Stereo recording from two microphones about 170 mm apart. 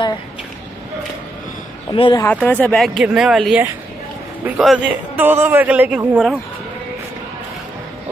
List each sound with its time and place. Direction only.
1.9 s speech: 30° left (ahead or behind)
2.4 s a man's voice: 10° left (ahead or behind)